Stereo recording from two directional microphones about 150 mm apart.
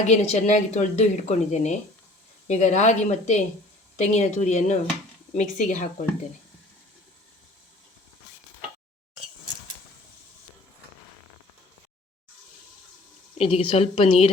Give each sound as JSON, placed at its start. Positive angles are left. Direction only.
{"t": 0.0, "sound": "speech", "side_deg": 45}
{"t": 13.3, "sound": "a woman's voice", "side_deg": 40}